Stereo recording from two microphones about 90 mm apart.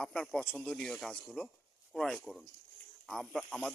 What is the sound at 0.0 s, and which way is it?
Speech, 10° left (ahead or behind).